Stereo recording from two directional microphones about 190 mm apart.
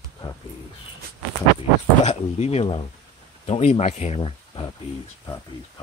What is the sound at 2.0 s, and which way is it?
Speech, 35° left (ahead or behind).